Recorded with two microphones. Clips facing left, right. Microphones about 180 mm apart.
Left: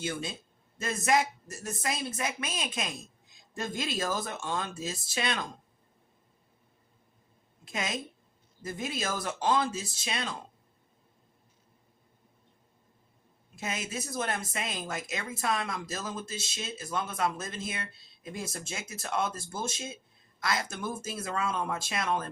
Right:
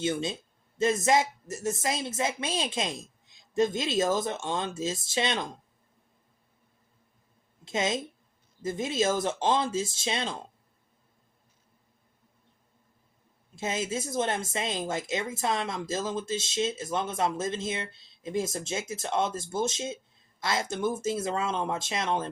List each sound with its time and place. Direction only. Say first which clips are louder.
0.0 s speech: right 6 dB; 20° right (ahead or behind)
7.6 s a woman's voice: right 6 dB; 25° right (ahead or behind)
13.6 s speech: right 5 dB; 25° right (ahead or behind)